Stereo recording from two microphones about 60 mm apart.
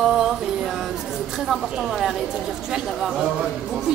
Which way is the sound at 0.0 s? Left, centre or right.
Centre.